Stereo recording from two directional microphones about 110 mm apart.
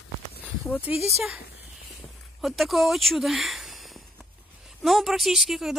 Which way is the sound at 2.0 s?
Centre (ahead or behind).